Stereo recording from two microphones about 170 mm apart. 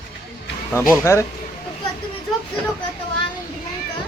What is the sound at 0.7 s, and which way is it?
Speech, 15° left (ahead or behind).